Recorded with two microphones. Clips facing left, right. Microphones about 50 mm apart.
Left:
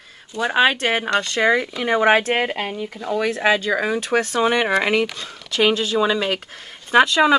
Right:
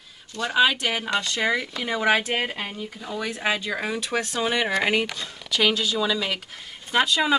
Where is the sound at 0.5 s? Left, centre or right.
Left.